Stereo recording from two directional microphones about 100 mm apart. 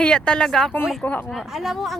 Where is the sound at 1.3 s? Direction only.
Centre (ahead or behind).